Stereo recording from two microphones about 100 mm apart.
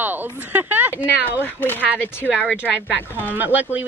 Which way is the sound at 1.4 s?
20° left (ahead or behind).